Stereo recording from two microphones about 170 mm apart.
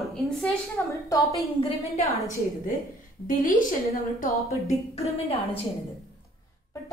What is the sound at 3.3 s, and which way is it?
Speech, 55° left (ahead or behind).